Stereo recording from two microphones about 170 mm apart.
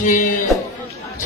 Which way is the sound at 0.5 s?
Centre (ahead or behind).